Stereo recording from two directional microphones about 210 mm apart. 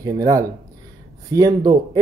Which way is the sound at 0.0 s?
15° right (ahead or behind).